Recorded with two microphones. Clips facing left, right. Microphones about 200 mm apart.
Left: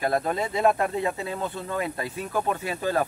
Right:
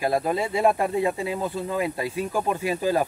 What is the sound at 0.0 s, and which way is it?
Speech, 10° right (ahead or behind).